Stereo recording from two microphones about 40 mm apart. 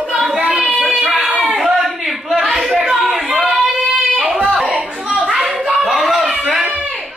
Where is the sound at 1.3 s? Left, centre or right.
Centre.